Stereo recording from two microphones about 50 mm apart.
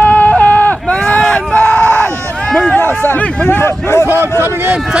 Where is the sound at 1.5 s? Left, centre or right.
Left.